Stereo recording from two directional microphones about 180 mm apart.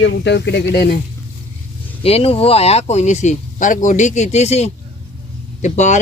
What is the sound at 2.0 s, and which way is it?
Speech, 35° left (ahead or behind).